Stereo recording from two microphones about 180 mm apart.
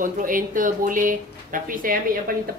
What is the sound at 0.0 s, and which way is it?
A woman's voice, 50° right (ahead or behind).